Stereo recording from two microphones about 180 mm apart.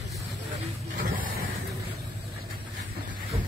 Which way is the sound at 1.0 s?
55° right (ahead or behind).